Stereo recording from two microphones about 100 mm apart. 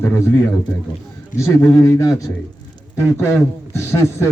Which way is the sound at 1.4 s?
30° left (ahead or behind).